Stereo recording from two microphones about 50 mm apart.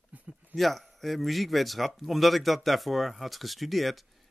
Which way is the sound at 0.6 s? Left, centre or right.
Centre.